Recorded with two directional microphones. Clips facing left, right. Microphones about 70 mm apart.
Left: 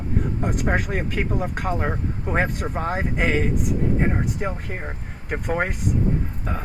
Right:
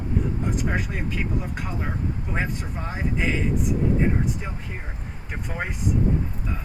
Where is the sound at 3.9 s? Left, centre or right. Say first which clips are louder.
Left 1 dB; left.